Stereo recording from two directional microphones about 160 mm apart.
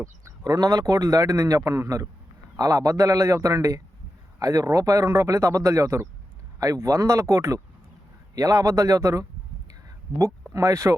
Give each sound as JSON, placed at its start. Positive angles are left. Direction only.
{"t": 0.0, "sound": "a man's voice", "side_deg": -20}
{"t": 10.5, "sound": "a man's voice", "side_deg": -20}